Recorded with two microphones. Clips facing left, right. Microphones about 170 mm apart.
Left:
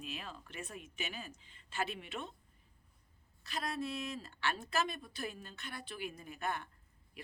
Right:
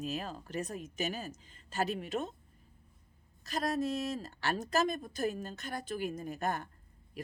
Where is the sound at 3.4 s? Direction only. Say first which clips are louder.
Right 7 dB; 40° right (ahead or behind).